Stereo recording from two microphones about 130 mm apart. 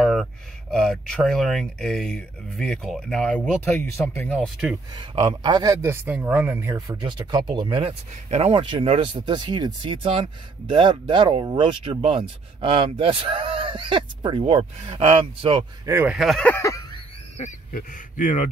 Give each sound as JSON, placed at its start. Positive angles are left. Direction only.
{"t": 0.0, "sound": "speech", "side_deg": 0}
{"t": 4.9, "sound": "speech", "side_deg": -40}
{"t": 5.8, "sound": "speech", "side_deg": -20}
{"t": 9.2, "sound": "speech", "side_deg": -35}
{"t": 15.8, "sound": "speech", "side_deg": -20}
{"t": 16.1, "sound": "speech", "side_deg": 0}
{"t": 16.4, "sound": "a sound", "side_deg": 20}
{"t": 17.4, "sound": "speech", "side_deg": 80}